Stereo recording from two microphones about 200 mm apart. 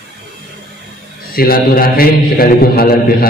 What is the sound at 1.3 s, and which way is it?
A man's voice, 45° left (ahead or behind).